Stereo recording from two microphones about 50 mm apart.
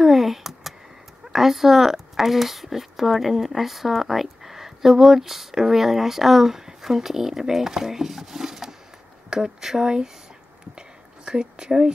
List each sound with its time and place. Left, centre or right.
0.0 s a sound: centre
1.3 s speech: centre
11.2 s speech: centre